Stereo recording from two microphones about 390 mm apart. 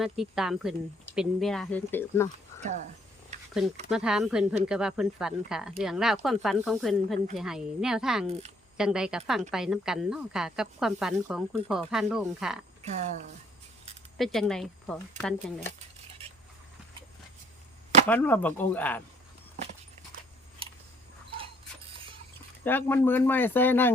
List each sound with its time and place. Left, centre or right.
0.0 s speech: centre
3.3 s a sound: centre
3.8 s speech: centre
8.3 s speech: centre
8.8 s speech: centre
12.8 s speech: centre
14.2 s speech: centre
18.1 s speech: centre
22.6 s speech: centre